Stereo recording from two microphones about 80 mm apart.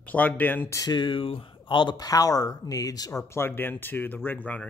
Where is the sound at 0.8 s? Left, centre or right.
Left.